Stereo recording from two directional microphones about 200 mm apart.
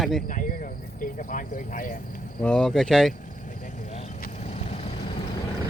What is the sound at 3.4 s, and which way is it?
Vehicle, 40° left (ahead or behind).